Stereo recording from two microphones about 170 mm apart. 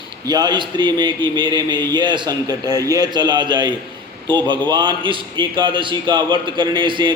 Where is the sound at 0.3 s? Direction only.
25° right (ahead or behind).